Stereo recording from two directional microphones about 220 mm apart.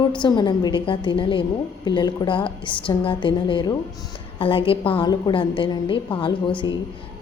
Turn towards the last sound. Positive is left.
turn(degrees=20)  # may be behind; listen again after turning